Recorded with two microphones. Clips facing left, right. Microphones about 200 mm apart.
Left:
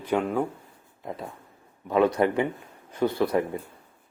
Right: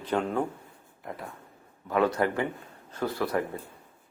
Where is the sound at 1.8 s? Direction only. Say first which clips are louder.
Left 4 dB; 20° left (ahead or behind).